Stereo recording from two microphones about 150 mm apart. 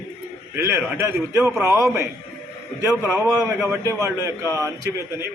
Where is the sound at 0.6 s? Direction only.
15° right (ahead or behind).